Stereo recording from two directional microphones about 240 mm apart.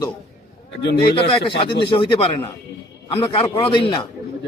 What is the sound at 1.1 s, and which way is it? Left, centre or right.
A man's voice, left.